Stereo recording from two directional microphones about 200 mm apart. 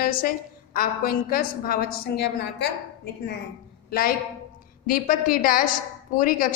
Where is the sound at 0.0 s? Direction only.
45° left (ahead or behind).